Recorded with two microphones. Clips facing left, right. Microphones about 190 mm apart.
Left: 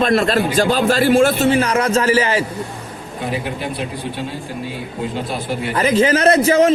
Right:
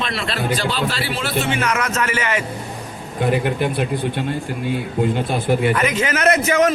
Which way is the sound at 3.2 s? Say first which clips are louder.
Right 5 dB; 55° right (ahead or behind).